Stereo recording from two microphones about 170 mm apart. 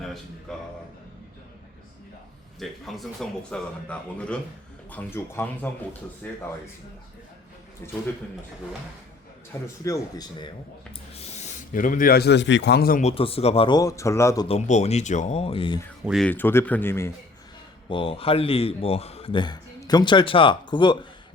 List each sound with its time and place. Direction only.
0.5 s speech: centre (ahead or behind)
2.6 s speech: centre (ahead or behind)
9.6 s speech: 20° left (ahead or behind)
11.1 s a man's voice: 40° left (ahead or behind); by 13.0 s 70° left (ahead or behind)
13.0 s speech: 35° left (ahead or behind); by 14.4 s 15° left (ahead or behind)
14.4 s a man's voice: 40° left (ahead or behind)
16.0 s speech: centre (ahead or behind)
16.3 s speech: 15° left (ahead or behind)
17.8 s a man's voice: 30° left (ahead or behind)